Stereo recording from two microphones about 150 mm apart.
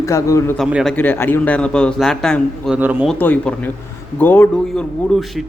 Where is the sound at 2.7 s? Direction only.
10° right (ahead or behind).